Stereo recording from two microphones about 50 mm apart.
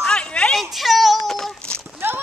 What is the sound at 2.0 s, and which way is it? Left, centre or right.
Clip-clop, right.